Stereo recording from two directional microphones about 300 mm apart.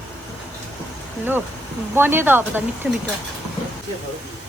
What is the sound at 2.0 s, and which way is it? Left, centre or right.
Speech, centre.